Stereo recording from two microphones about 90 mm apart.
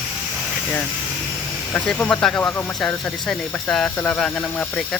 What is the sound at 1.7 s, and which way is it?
Speech, 15° left (ahead or behind).